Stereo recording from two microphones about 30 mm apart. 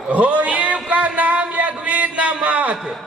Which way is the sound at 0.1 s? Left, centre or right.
Right.